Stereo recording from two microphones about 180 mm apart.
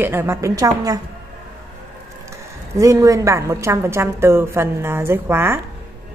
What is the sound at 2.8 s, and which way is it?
A woman's voice, 15° right (ahead or behind).